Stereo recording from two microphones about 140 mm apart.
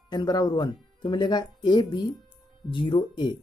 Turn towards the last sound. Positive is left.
turn(degrees=35)  # may be behind; listen again after turning